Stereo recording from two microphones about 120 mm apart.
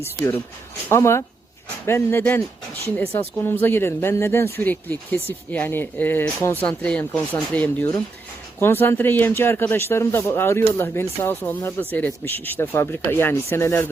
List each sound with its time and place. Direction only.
0.9 s speech: 20° left (ahead or behind)